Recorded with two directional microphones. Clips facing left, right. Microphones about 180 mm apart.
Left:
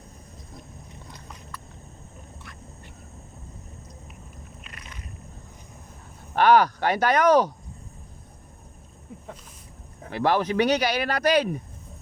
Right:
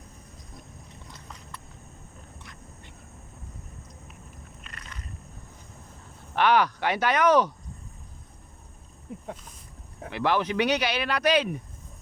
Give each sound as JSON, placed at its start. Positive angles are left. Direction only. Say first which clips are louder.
{"t": 4.6, "sound": "a sound", "louder": "left 1 dB", "side_deg": 10}
{"t": 6.3, "sound": "speech", "louder": "left 4 dB", "side_deg": 40}
{"t": 10.1, "sound": "speech", "louder": "left 3 dB", "side_deg": 40}